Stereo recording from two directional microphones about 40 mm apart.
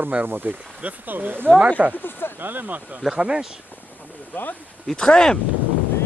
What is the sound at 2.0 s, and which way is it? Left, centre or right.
Speech, left.